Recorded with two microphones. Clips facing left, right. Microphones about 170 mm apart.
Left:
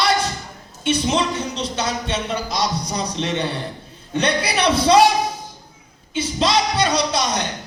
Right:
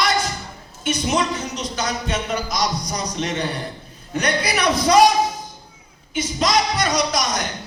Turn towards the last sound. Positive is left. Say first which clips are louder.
# left 1 dB
turn(degrees=30)  # may be behind; listen again after turning